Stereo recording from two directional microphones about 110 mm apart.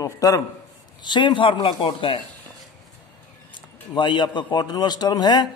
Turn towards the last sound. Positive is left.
turn(degrees=40)  # may be behind; listen again after turning